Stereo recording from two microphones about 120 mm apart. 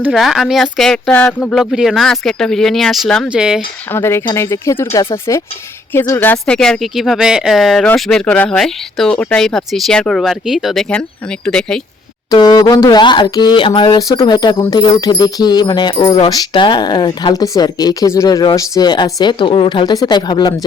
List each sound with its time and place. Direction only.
0.1 s speech: centre (ahead or behind)
3.9 s a woman's voice: 20° left (ahead or behind)
6.4 s speech: 5° left (ahead or behind)
12.3 s speech: 30° left (ahead or behind)